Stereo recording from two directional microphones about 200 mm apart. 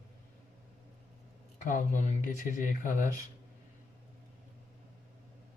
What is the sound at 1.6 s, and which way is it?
Speech, 40° left (ahead or behind).